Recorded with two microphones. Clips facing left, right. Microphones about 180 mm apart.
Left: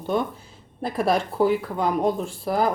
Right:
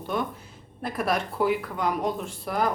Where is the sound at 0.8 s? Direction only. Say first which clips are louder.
Left 4 dB; 30° left (ahead or behind).